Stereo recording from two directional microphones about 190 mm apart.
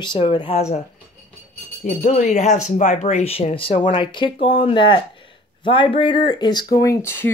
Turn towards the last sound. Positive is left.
turn(degrees=15)  # may be behind; listen again after turning